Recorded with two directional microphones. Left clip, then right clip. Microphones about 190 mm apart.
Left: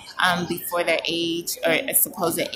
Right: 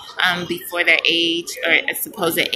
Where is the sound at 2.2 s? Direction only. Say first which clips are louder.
Right 5 dB; 10° left (ahead or behind).